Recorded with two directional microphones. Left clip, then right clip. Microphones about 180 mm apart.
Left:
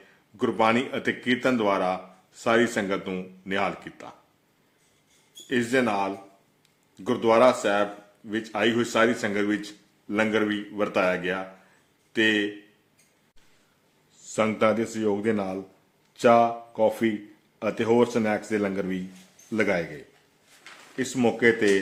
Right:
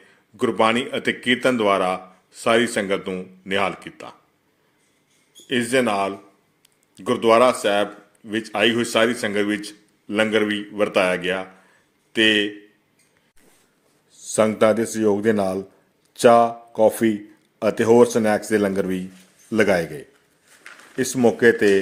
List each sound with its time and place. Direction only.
0.3 s a man's voice: 10° right (ahead or behind)
5.5 s a man's voice: 10° right (ahead or behind)
14.2 s speech: 25° right (ahead or behind)
20.9 s speech: 25° right (ahead or behind)